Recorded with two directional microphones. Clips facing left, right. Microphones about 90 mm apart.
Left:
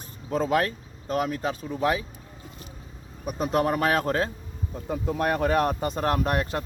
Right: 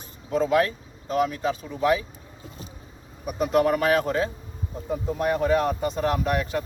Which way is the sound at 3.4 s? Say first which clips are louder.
Right 3 dB; 35° left (ahead or behind).